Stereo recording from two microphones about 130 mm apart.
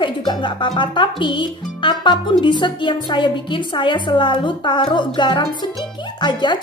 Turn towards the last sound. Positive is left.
turn(degrees=35)  # may be behind; listen again after turning